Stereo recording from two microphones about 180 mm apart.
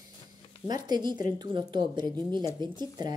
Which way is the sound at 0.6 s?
25° right (ahead or behind).